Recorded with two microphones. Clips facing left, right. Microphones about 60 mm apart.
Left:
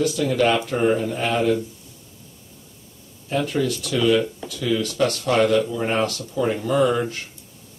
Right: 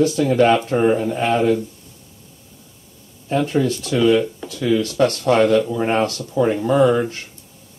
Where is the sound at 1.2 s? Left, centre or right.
Right.